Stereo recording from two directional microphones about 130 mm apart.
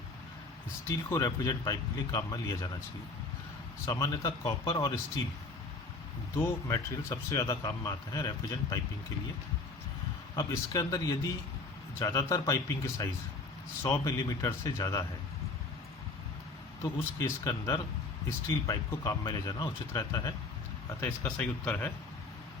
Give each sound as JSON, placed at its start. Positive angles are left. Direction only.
{"t": 0.9, "sound": "a man's voice", "side_deg": 25}
{"t": 3.8, "sound": "a man's voice", "side_deg": 25}
{"t": 4.3, "sound": "speech", "side_deg": 40}
{"t": 4.8, "sound": "a man's voice", "side_deg": 25}
{"t": 6.3, "sound": "a man's voice", "side_deg": 20}
{"t": 10.3, "sound": "a man's voice", "side_deg": 25}
{"t": 16.8, "sound": "a man's voice", "side_deg": 20}
{"t": 21.0, "sound": "speech", "side_deg": 10}